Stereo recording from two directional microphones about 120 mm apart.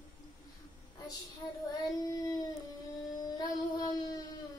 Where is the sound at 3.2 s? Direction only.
30° left (ahead or behind).